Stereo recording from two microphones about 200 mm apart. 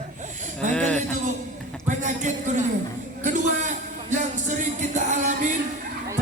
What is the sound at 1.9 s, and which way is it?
Speech, 40° right (ahead or behind).